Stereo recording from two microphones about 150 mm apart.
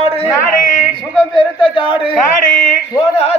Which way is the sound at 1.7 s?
35° left (ahead or behind).